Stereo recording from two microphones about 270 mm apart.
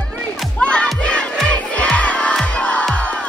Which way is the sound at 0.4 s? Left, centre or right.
Centre.